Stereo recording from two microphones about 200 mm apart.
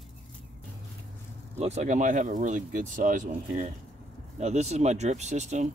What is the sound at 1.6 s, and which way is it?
Speech, 35° right (ahead or behind).